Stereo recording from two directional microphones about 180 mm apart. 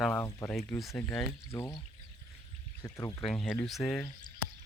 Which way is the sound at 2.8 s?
20° left (ahead or behind).